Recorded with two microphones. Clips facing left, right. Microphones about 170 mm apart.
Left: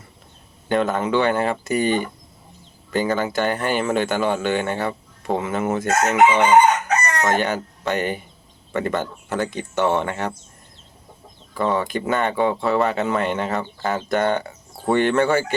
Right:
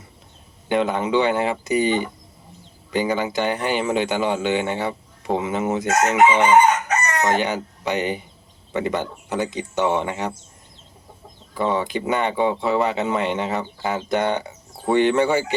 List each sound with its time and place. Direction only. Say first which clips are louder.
0.7 s speech: even; 20° right (ahead or behind)
11.5 s speech: even; 20° right (ahead or behind)